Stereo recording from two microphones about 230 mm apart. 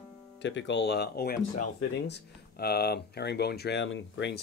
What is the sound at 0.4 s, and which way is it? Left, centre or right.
Speech, left.